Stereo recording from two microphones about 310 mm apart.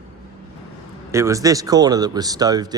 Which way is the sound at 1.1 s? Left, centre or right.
Centre.